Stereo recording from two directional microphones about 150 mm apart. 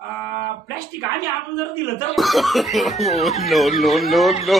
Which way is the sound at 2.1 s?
Centre (ahead or behind).